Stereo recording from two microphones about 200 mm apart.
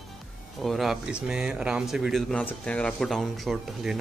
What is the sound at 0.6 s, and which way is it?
Speech, centre (ahead or behind).